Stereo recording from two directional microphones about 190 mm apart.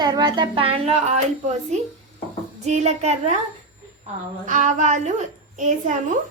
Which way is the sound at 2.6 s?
35° right (ahead or behind).